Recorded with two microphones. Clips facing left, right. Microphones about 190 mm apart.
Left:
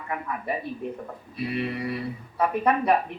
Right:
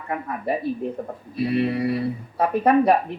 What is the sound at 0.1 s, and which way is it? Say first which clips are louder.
Speech: right 5 dB; 40° right (ahead or behind).